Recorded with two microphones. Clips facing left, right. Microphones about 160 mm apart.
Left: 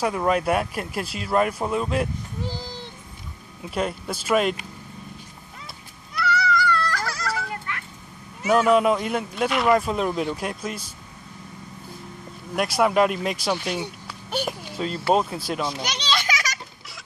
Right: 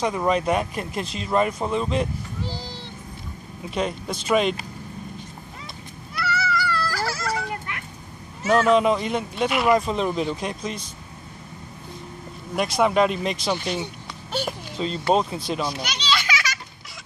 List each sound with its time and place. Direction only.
0.0 s speech: 5° left (ahead or behind)
3.7 s speech: 5° left (ahead or behind)
6.1 s a sound: 5° right (ahead or behind)
7.3 s a sound: 20° right (ahead or behind)
8.4 s speech: 10° left (ahead or behind)
12.5 s speech: 5° left (ahead or behind)
16.3 s children playing: 40° left (ahead or behind)